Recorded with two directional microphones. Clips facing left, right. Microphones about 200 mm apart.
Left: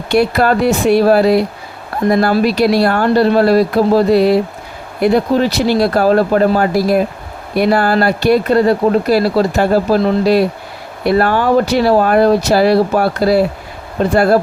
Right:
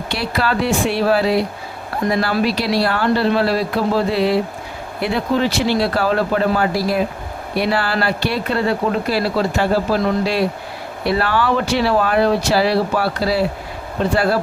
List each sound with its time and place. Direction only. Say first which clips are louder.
0.1 s speech: left 9 dB; 50° left (ahead or behind)
2.4 s speech: left 6 dB; 45° left (ahead or behind)
11.0 s speech: left 5 dB; 45° left (ahead or behind)